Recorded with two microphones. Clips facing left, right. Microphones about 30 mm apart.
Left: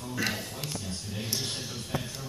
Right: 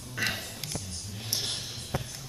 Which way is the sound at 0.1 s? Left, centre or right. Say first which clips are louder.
Even; centre.